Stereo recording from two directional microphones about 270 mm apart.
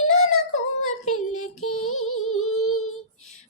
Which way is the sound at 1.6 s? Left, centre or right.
Left.